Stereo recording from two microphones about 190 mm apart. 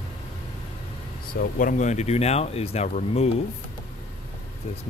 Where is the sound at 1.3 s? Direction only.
50° left (ahead or behind).